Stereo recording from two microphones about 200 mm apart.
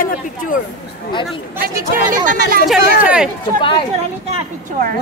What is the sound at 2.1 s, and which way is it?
Speech, 45° right (ahead or behind).